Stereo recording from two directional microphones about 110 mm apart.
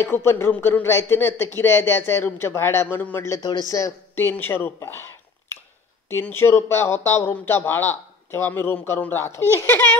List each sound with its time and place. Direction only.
0.0 s speech: 20° left (ahead or behind)
3.3 s speech: 35° left (ahead or behind)
6.0 s speech: 20° left (ahead or behind)